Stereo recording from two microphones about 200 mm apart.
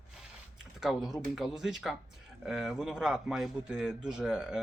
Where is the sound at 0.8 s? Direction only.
Centre (ahead or behind).